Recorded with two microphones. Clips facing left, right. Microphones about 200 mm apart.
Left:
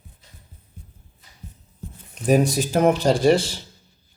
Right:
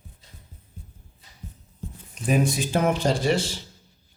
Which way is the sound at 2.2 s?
40° left (ahead or behind).